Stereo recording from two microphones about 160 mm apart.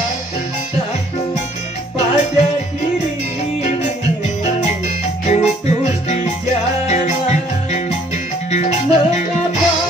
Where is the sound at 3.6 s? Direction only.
50° left (ahead or behind).